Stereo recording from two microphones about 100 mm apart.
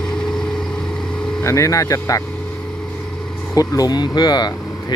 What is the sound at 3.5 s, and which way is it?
Speech, 40° left (ahead or behind).